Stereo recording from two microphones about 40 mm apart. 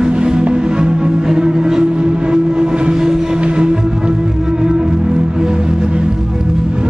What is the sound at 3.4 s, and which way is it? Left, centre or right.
Music, right.